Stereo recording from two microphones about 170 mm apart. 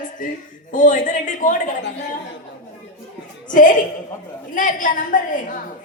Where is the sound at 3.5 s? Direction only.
50° left (ahead or behind).